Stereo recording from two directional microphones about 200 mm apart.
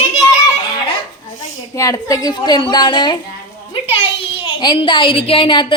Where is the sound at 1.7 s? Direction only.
15° left (ahead or behind).